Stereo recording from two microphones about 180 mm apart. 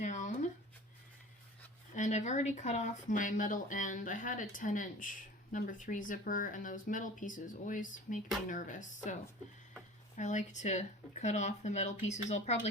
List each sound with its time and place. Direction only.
0.0 s a sound: 45° left (ahead or behind)
1.9 s speech: 45° left (ahead or behind)
10.2 s speech: 40° left (ahead or behind)